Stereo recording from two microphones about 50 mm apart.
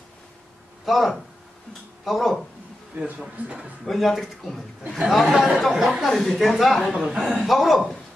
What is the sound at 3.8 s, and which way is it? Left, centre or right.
Speech, centre.